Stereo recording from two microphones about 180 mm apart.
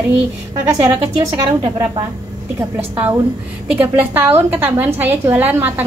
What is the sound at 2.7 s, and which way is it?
A woman's voice, 10° right (ahead or behind).